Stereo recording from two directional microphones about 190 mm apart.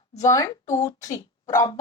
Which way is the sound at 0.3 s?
20° left (ahead or behind).